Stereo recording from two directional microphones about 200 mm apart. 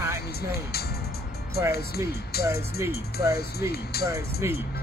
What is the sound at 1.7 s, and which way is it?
Speech, 50° left (ahead or behind).